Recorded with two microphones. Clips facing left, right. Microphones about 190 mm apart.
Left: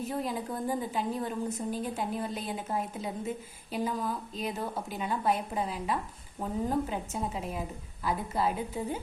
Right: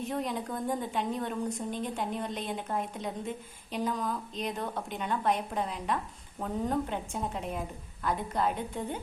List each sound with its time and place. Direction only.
0.0 s a woman's voice: 5° left (ahead or behind)